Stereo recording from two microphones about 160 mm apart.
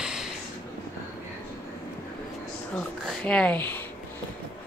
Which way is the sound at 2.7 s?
5° left (ahead or behind).